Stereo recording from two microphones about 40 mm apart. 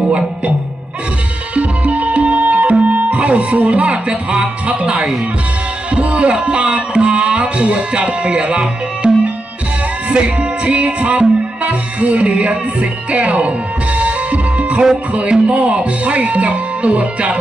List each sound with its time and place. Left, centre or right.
1.5 s music: right
3.1 s speech: right
5.9 s music: right
6.4 s speech: right
10.0 s music: right
15.4 s speech: right